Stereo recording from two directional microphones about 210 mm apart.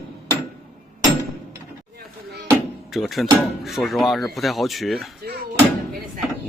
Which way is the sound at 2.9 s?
Centre (ahead or behind).